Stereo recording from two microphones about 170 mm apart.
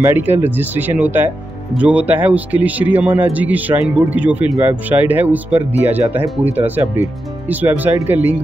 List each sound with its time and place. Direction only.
0.0 s speech: 15° right (ahead or behind)